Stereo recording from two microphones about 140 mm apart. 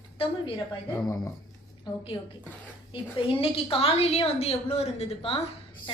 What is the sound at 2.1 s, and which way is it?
Speech, 25° left (ahead or behind).